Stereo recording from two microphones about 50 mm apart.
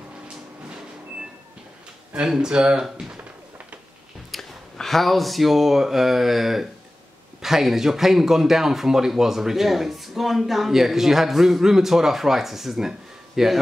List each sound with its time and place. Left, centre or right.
2.2 s speech: centre
4.3 s speech: centre